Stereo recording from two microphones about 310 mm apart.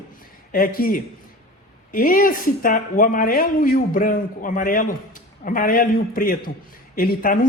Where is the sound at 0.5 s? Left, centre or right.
Left.